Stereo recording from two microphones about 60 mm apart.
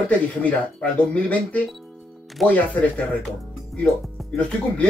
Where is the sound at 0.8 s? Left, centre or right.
Left.